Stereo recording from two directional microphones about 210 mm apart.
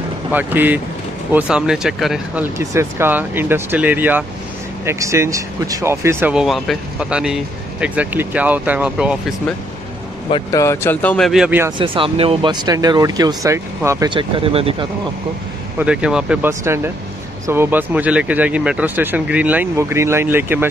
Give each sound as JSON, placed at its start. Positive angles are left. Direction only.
{"t": 0.3, "sound": "speech", "side_deg": -10}
{"t": 2.6, "sound": "speech", "side_deg": -15}
{"t": 10.3, "sound": "speech", "side_deg": 15}
{"t": 11.8, "sound": "speech", "side_deg": -25}
{"t": 15.8, "sound": "speech", "side_deg": -5}